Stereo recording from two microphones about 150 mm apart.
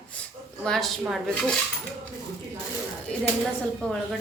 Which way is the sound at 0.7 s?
Centre (ahead or behind).